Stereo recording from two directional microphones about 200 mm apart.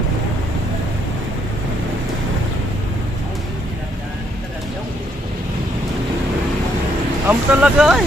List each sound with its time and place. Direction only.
7.3 s speech: 5° right (ahead or behind)